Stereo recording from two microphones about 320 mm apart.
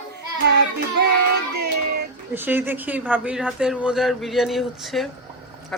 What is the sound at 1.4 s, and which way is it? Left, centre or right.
Child singing, right.